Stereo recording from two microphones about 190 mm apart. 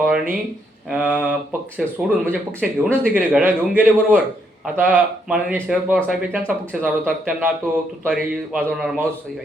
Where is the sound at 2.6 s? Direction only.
10° right (ahead or behind).